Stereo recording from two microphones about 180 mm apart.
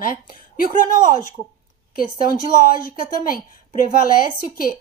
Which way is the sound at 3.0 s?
50° left (ahead or behind).